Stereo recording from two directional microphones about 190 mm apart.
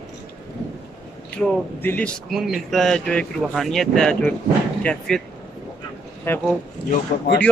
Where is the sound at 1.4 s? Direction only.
5° left (ahead or behind).